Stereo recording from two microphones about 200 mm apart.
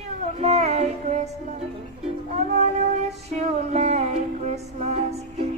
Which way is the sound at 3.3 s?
35° right (ahead or behind).